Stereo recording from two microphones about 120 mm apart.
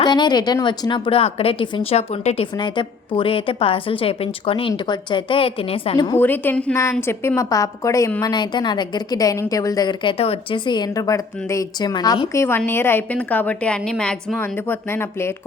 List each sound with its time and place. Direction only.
0.0 s a woman's voice: 35° left (ahead or behind); by 2.5 s 60° left (ahead or behind)
2.6 s a woman's voice: 45° left (ahead or behind)
6.1 s a woman's voice: 15° left (ahead or behind)
7.1 s a woman's voice: 25° left (ahead or behind)
8.2 s a woman's voice: 40° left (ahead or behind)
12.4 s a woman's voice: 20° left (ahead or behind)
14.3 s a woman's voice: 20° left (ahead or behind)